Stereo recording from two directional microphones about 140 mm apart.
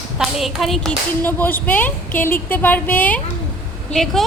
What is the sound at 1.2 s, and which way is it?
A woman's voice, 15° left (ahead or behind).